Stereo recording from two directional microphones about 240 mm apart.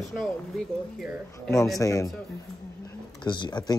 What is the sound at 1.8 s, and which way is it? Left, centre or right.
Speech, centre.